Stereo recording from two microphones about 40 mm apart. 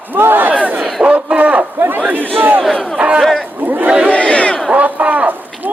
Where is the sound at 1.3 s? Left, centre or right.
Right.